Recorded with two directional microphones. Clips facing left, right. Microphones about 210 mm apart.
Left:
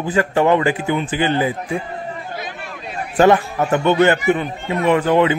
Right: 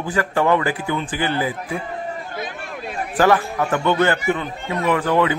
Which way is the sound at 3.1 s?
25° left (ahead or behind).